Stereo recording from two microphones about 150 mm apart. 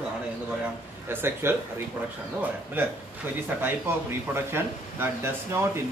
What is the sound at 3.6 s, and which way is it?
Speech, 15° right (ahead or behind).